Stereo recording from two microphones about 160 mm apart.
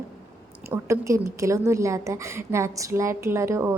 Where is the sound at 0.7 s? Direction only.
20° right (ahead or behind).